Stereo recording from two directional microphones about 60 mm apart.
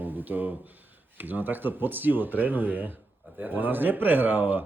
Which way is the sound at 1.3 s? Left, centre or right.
Right.